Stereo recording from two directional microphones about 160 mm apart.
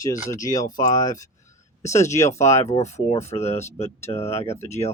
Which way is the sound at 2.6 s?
45° left (ahead or behind).